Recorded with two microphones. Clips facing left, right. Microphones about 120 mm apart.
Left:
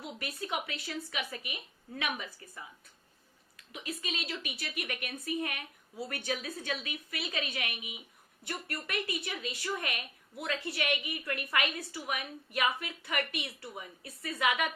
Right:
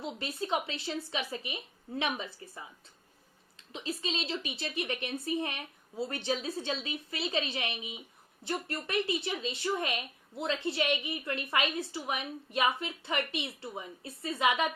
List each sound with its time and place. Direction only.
0.0 s a woman's voice: 25° right (ahead or behind)